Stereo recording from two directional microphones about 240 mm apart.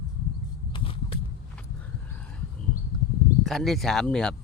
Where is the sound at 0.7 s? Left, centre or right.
Left.